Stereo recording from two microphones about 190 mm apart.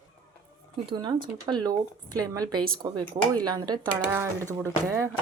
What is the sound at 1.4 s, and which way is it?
Speech, 20° right (ahead or behind).